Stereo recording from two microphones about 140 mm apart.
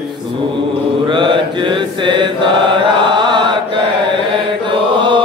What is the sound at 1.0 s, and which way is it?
Mantra, 35° right (ahead or behind).